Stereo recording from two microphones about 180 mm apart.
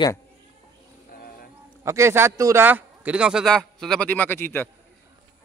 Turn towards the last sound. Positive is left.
turn(degrees=10)  # may be behind; listen again after turning